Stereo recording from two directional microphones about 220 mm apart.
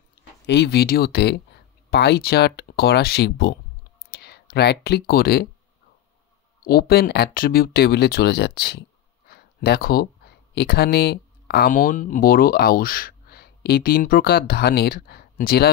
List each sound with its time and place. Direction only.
0.5 s speech: 50° left (ahead or behind)
6.6 s speech: 45° left (ahead or behind)